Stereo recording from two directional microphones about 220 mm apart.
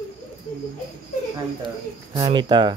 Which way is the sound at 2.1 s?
20° right (ahead or behind).